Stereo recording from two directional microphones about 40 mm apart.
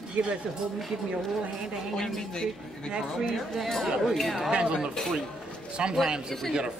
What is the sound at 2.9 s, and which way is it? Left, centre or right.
Speech, centre.